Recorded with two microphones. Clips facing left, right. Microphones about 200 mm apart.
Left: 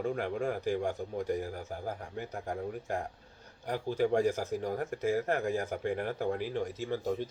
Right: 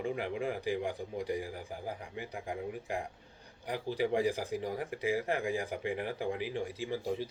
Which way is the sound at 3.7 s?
50° left (ahead or behind).